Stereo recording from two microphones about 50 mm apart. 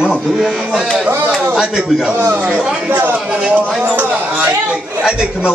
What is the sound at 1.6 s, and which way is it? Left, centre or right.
Speech, centre.